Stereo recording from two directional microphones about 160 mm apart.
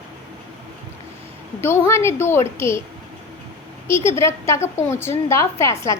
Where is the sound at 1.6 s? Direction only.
15° left (ahead or behind).